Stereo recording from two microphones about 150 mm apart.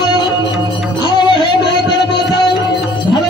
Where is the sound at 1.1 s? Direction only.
30° left (ahead or behind).